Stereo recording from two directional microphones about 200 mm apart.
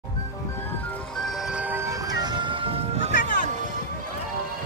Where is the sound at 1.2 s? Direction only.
5° right (ahead or behind); by 3.1 s 25° right (ahead or behind).